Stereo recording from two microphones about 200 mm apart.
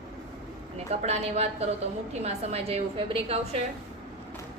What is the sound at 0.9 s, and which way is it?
A woman's voice, 35° right (ahead or behind).